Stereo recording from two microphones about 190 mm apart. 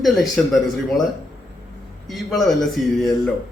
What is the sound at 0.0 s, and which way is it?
Speech, centre (ahead or behind).